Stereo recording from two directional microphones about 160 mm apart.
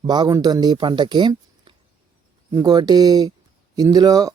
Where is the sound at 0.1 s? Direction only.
25° right (ahead or behind).